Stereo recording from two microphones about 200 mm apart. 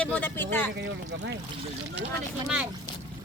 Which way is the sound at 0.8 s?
60° right (ahead or behind).